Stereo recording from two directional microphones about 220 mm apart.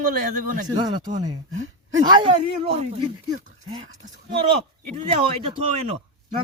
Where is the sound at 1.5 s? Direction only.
60° right (ahead or behind).